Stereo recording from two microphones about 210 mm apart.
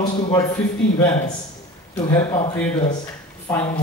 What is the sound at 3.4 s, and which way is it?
Speech, 20° left (ahead or behind).